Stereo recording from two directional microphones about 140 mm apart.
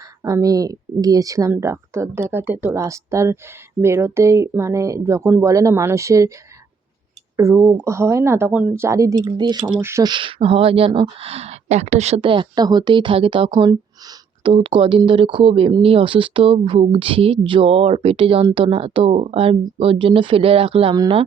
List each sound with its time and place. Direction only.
0.2 s speech: 20° right (ahead or behind)
7.3 s speech: 20° right (ahead or behind)
9.8 s speech: 20° right (ahead or behind)
10.1 s speech: 35° right (ahead or behind)
13.5 s speech: 30° right (ahead or behind)